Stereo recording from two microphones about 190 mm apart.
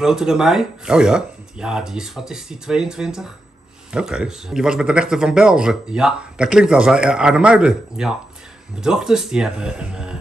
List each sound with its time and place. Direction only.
0.0 s speech: 5° right (ahead or behind)